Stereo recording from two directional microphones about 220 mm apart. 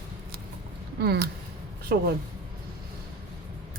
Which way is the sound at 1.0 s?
45° right (ahead or behind).